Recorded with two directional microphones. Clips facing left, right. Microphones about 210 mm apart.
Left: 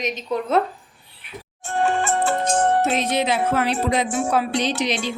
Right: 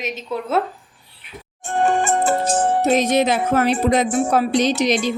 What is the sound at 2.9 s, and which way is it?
Music, 45° right (ahead or behind).